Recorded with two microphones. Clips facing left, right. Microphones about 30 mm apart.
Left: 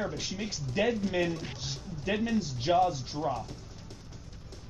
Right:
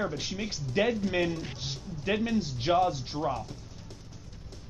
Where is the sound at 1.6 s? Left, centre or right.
Centre.